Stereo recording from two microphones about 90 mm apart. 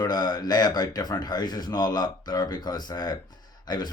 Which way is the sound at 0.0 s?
50° left (ahead or behind).